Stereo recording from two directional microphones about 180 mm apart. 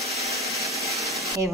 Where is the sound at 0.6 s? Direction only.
15° right (ahead or behind).